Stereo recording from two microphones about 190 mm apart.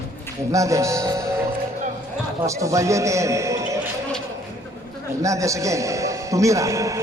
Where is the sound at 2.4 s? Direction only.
15° right (ahead or behind).